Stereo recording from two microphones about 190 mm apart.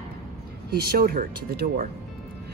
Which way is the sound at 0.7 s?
50° right (ahead or behind).